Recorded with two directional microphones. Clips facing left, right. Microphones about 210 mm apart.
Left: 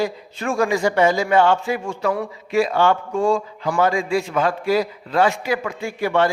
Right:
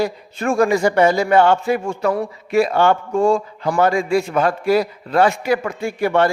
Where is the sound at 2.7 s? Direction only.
45° right (ahead or behind).